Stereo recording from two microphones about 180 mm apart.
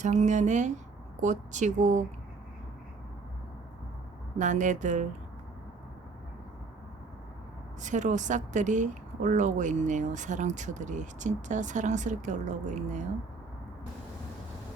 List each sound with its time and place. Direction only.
0.0 s a woman's voice: 40° right (ahead or behind)
4.4 s a woman's voice: 45° right (ahead or behind)
7.8 s a woman's voice: 45° right (ahead or behind)